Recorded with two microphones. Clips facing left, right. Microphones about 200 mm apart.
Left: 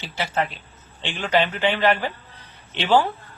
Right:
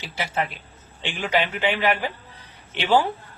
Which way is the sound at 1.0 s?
10° right (ahead or behind).